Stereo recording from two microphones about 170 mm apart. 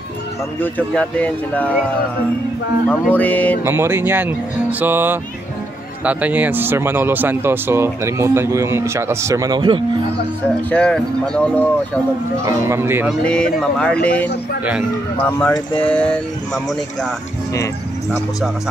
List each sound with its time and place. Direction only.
0.6 s speech: 10° left (ahead or behind)
2.9 s speech: 10° left (ahead or behind)
3.6 s speech: 15° right (ahead or behind)
10.7 s speech: 5° left (ahead or behind)
12.4 s speech: 15° right (ahead or behind)
13.1 s speech: 5° left (ahead or behind)